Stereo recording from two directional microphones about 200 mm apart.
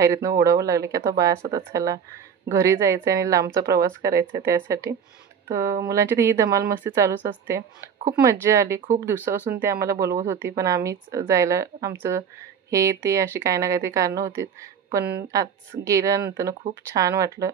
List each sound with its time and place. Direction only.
0.0 s speech: 15° right (ahead or behind)